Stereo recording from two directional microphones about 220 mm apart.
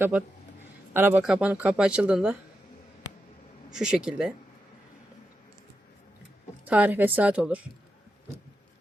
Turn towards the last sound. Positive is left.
turn(degrees=-5)  # may be behind; listen again after turning